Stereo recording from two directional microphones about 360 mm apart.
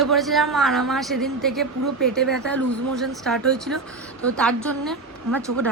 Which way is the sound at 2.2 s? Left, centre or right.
Right.